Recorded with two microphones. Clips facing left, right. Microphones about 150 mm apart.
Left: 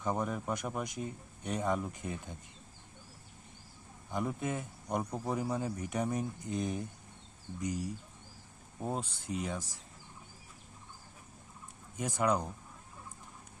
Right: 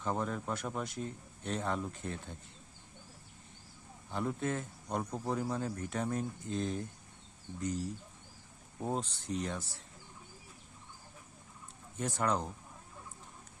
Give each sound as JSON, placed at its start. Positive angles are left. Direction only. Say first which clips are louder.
{"t": 0.0, "sound": "speech", "louder": "left 1 dB", "side_deg": 15}
{"t": 4.1, "sound": "speech", "louder": "even", "side_deg": 15}
{"t": 8.9, "sound": "speech", "louder": "right 1 dB", "side_deg": 10}
{"t": 11.9, "sound": "speech", "louder": "left 2 dB", "side_deg": 10}